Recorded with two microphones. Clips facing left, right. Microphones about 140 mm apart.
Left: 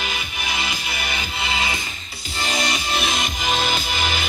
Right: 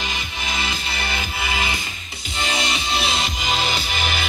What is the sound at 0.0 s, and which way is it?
Music, 15° left (ahead or behind).